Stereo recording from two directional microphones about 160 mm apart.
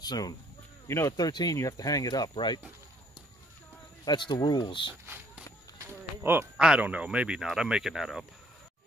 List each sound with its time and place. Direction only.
0.0 s speech: 25° left (ahead or behind)
4.0 s speech: 25° left (ahead or behind)
5.0 s a sound: 15° right (ahead or behind)
6.2 s speech: 15° right (ahead or behind)